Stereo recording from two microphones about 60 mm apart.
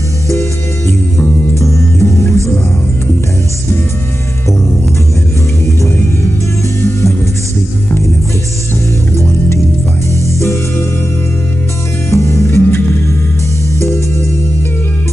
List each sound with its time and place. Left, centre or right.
0.3 s music: left
6.8 s music: left
10.2 s music: left
12.1 s music: left
12.4 s music: left